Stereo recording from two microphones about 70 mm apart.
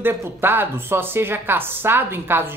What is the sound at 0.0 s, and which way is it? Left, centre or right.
A woman's voice, right.